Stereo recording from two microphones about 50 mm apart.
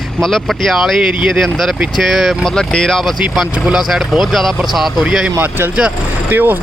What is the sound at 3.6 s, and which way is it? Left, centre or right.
Speech, centre.